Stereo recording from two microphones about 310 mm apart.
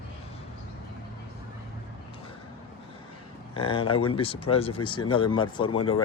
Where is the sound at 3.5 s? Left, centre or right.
Centre.